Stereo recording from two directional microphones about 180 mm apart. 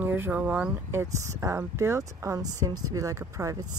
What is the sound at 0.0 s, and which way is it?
Speech, 10° right (ahead or behind).